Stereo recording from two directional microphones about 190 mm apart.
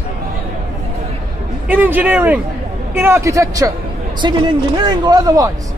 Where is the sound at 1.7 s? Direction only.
10° right (ahead or behind).